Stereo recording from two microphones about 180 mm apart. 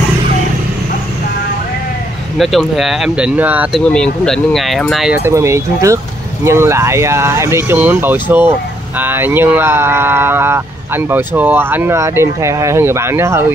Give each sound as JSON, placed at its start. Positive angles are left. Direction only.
{"t": 2.3, "sound": "speech", "side_deg": 0}
{"t": 3.8, "sound": "speech", "side_deg": 5}
{"t": 5.1, "sound": "speech", "side_deg": -15}